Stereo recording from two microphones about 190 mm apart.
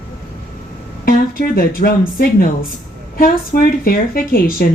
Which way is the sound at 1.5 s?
50° left (ahead or behind).